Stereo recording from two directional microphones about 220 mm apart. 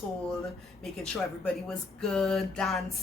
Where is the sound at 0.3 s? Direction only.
Centre (ahead or behind).